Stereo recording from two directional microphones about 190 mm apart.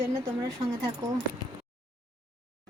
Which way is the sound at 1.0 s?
15° right (ahead or behind).